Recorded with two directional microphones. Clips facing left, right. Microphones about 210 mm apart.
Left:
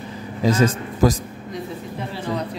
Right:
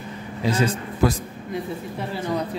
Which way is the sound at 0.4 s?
45° left (ahead or behind).